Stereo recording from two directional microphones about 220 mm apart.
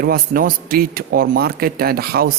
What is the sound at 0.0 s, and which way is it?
A man's voice, 40° right (ahead or behind).